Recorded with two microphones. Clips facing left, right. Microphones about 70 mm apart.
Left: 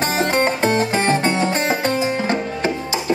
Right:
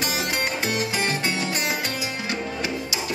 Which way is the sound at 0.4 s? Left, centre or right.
Left.